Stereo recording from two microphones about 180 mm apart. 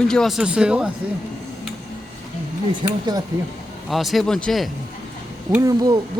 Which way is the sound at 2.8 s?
20° right (ahead or behind).